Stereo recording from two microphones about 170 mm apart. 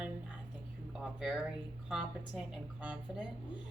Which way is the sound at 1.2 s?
Centre (ahead or behind).